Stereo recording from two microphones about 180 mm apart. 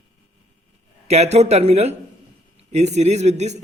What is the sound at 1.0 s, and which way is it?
Speech, 35° right (ahead or behind).